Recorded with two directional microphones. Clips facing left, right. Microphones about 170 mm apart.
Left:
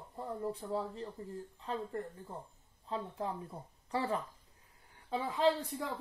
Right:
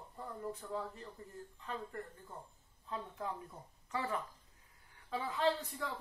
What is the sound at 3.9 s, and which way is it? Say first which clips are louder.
Speech: left 4 dB; 35° left (ahead or behind).